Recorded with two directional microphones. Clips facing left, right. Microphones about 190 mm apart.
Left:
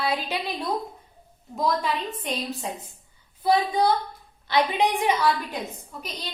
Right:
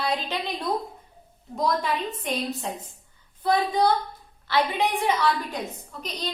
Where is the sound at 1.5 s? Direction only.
Centre (ahead or behind).